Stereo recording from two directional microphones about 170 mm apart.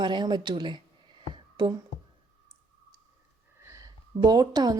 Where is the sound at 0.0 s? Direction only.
25° right (ahead or behind).